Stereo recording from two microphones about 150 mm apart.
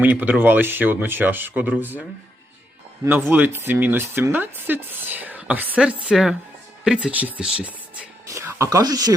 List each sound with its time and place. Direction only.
0.0 s speech: 10° right (ahead or behind)
8.3 s speech: 20° right (ahead or behind)